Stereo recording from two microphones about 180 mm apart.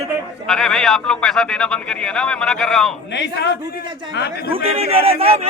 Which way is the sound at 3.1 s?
75° left (ahead or behind).